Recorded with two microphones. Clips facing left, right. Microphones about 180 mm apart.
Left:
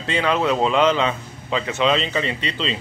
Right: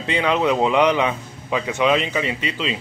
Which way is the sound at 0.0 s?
15° right (ahead or behind).